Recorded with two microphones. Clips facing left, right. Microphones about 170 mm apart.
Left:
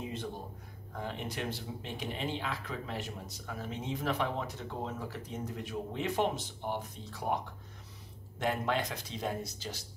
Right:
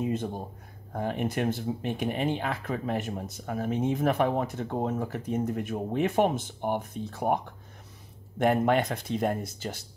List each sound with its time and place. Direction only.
0.0 s a sound: 50° right (ahead or behind)
0.9 s speech: 55° right (ahead or behind)
8.4 s speech: 55° right (ahead or behind)